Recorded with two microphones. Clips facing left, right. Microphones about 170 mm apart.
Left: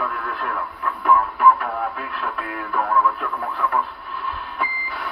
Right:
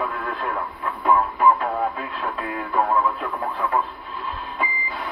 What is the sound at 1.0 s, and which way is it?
Music, 25° right (ahead or behind).